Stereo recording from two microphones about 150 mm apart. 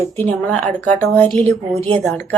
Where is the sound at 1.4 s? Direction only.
45° right (ahead or behind).